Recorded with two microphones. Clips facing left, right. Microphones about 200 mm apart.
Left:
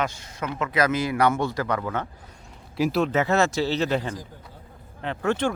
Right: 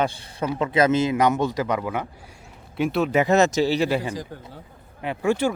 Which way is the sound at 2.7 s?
Centre (ahead or behind).